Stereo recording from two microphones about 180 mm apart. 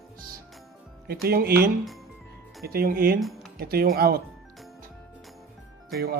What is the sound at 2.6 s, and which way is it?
Speech, 55° right (ahead or behind).